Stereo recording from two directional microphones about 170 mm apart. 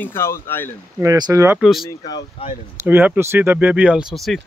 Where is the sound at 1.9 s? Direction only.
25° left (ahead or behind).